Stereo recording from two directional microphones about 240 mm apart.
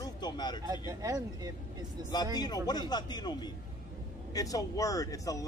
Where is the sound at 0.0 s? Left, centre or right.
Centre.